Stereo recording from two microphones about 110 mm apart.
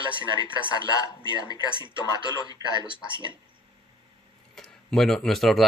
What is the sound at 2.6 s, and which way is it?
Speech, 30° right (ahead or behind).